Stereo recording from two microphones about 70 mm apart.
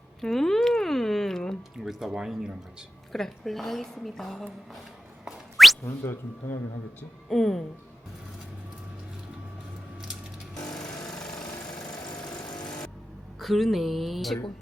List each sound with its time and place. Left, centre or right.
0.2 s a sound: centre
1.8 s speech: centre
3.1 s a woman's voice: centre
5.2 s a sound: centre
5.8 s speech: left
7.3 s a woman's voice: centre
10.7 s lawn mower: centre
12.2 s vehicle: centre
12.5 s vehicle: left
13.4 s a woman's voice: centre